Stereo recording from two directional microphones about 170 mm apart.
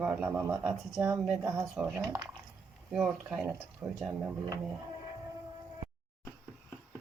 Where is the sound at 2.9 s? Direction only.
5° right (ahead or behind).